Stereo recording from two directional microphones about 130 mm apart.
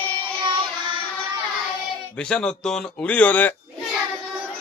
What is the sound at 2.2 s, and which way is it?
Speech, 5° left (ahead or behind).